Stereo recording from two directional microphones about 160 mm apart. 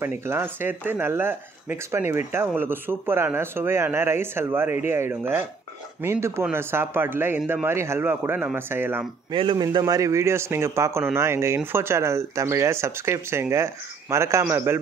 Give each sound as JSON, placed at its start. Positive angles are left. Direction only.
{"t": 0.0, "sound": "speech", "side_deg": -15}
{"t": 6.4, "sound": "speech", "side_deg": -15}
{"t": 9.3, "sound": "speech", "side_deg": -30}